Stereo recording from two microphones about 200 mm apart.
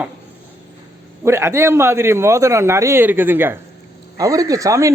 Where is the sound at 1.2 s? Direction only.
10° right (ahead or behind).